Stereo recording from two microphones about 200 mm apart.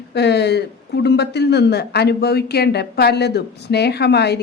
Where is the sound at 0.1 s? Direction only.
55° left (ahead or behind).